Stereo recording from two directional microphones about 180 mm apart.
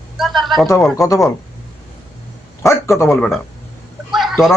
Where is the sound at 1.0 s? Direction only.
20° left (ahead or behind).